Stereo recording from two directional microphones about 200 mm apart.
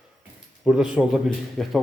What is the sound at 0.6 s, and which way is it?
Speech, 5° right (ahead or behind).